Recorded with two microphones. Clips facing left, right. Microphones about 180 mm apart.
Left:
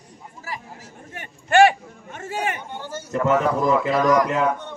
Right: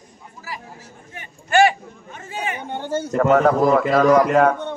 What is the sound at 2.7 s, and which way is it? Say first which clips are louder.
A man's voice: right 6 dB; 60° right (ahead or behind).